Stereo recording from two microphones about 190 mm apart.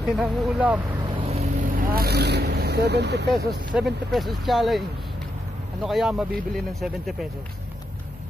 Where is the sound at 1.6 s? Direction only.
50° right (ahead or behind).